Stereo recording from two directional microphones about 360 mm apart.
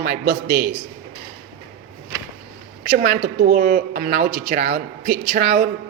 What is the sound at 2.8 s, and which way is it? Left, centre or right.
A man's voice, right.